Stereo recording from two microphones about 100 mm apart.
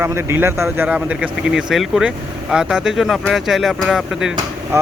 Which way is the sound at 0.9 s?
10° right (ahead or behind).